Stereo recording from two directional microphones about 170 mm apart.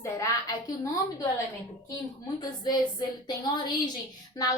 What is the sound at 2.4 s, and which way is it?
A woman's voice, 25° left (ahead or behind).